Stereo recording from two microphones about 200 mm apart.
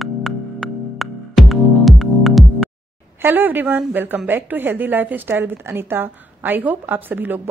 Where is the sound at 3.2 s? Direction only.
10° right (ahead or behind).